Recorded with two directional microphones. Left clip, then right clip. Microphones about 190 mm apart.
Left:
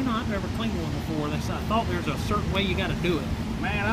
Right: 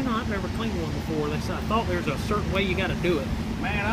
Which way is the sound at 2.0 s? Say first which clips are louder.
Right 1 dB; 40° left (ahead or behind).